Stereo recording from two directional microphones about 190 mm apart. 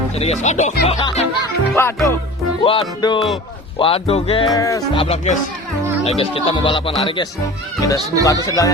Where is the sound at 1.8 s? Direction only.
10° left (ahead or behind).